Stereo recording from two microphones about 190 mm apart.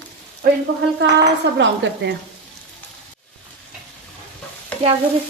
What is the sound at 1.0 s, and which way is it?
Dishes, 70° right (ahead or behind).